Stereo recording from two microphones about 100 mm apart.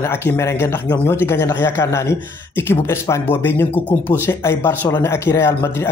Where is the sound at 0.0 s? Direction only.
25° left (ahead or behind).